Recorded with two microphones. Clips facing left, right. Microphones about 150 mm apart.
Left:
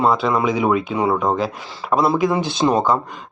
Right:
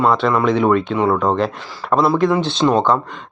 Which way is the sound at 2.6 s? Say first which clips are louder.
Right 2 dB; 20° left (ahead or behind).